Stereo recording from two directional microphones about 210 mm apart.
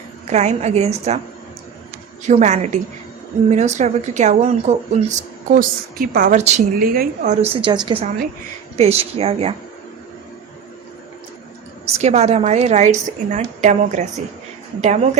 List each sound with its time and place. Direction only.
0.3 s speech: 30° right (ahead or behind)
2.2 s speech: 35° right (ahead or behind)
7.4 s a woman's voice: 25° right (ahead or behind)
11.9 s speech: 30° right (ahead or behind)